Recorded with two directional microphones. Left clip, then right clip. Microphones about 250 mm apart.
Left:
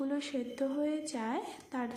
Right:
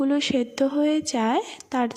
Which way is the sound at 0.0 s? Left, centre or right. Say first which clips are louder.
Right 13 dB; right.